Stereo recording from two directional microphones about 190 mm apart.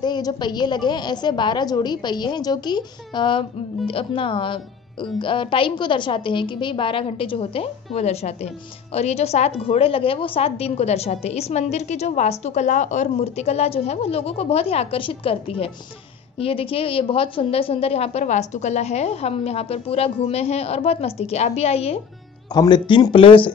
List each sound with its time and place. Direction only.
0.0 s a woman's voice: 20° left (ahead or behind)